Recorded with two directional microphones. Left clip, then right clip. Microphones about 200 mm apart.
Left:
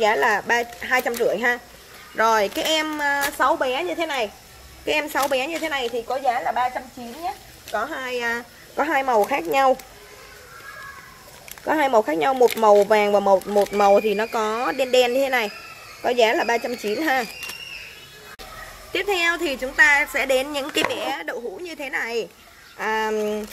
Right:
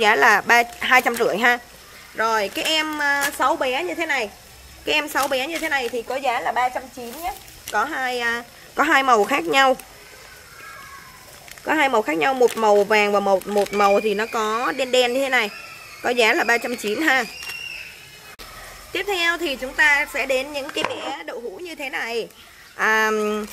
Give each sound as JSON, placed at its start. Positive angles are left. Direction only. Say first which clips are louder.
{"t": 0.0, "sound": "a woman's voice", "louder": "right 4 dB", "side_deg": -20}
{"t": 2.1, "sound": "a woman's voice", "louder": "left 2 dB", "side_deg": 15}
{"t": 5.9, "sound": "a woman's voice", "louder": "even", "side_deg": -35}
{"t": 8.0, "sound": "a woman's voice", "louder": "right 2 dB", "side_deg": -10}
{"t": 8.7, "sound": "speech", "louder": "right 3 dB", "side_deg": -20}
{"t": 11.6, "sound": "a woman's voice", "louder": "even", "side_deg": -5}
{"t": 18.9, "sound": "a woman's voice", "louder": "even", "side_deg": 5}
{"t": 21.6, "sound": "speech", "louder": "even", "side_deg": 0}
{"t": 22.8, "sound": "a woman's voice", "louder": "right 4 dB", "side_deg": -15}